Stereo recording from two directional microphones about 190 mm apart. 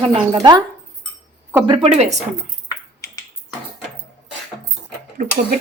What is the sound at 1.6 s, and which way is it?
Speech, 25° right (ahead or behind).